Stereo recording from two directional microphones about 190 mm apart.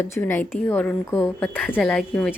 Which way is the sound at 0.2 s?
10° left (ahead or behind).